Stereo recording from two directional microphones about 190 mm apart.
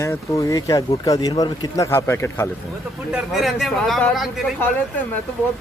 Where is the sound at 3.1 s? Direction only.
Centre (ahead or behind).